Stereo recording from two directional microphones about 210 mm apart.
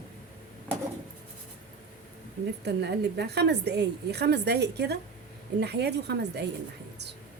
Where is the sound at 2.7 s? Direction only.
55° right (ahead or behind).